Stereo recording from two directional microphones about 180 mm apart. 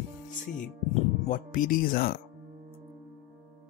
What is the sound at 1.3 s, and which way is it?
Speech, 50° left (ahead or behind).